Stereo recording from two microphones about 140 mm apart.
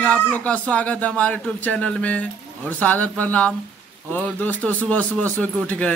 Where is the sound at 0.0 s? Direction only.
10° left (ahead or behind).